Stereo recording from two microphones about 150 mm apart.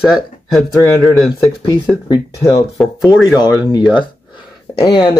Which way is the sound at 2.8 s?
Centre (ahead or behind).